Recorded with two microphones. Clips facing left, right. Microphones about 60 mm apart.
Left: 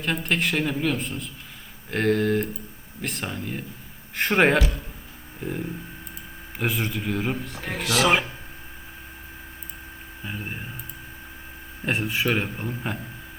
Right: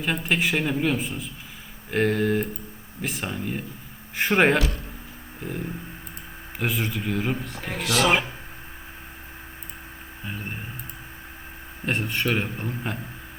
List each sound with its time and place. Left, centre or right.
0.0 s speech: centre
6.6 s speech: centre
10.2 s speech: centre
11.9 s speech: centre